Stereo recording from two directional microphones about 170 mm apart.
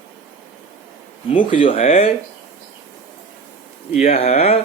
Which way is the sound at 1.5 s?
35° left (ahead or behind).